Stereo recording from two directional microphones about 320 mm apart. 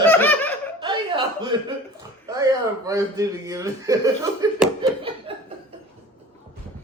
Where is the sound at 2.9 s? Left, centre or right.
Centre.